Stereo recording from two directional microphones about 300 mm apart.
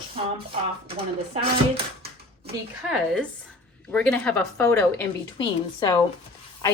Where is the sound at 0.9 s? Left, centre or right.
Right.